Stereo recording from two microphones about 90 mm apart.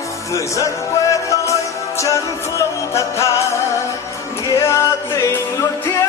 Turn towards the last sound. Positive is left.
turn(degrees=40)  # may be behind; listen again after turning